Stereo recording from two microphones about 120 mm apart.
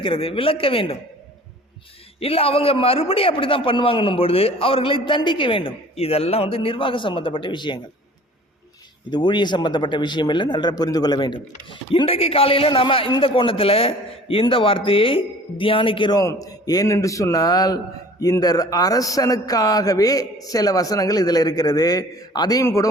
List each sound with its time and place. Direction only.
0.0 s a man's voice: 50° left (ahead or behind)
2.2 s a man's voice: 55° left (ahead or behind)
9.0 s a man's voice: 40° left (ahead or behind)
16.2 s a man's voice: 30° left (ahead or behind)